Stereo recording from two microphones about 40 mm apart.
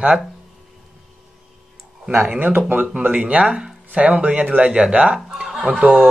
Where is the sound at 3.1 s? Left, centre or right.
Right.